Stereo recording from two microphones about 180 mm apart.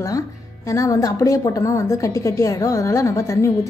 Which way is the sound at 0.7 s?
15° left (ahead or behind).